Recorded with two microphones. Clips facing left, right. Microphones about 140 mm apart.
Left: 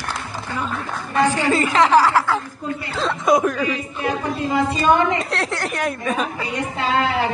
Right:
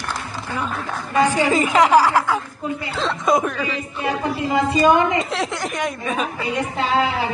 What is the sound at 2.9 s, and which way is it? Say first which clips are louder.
Chuckle: left 2 dB; centre (ahead or behind).